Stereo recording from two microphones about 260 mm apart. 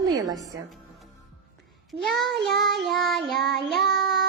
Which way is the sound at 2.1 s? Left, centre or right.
Right.